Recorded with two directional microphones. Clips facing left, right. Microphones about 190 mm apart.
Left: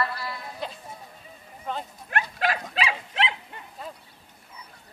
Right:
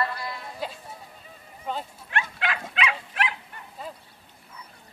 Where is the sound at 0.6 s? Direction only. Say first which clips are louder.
Right 1 dB; 5° right (ahead or behind).